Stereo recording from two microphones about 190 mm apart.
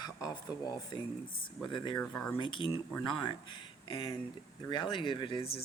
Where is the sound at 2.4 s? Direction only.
25° left (ahead or behind).